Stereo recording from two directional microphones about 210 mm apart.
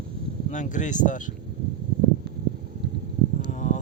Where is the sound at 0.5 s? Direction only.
35° left (ahead or behind).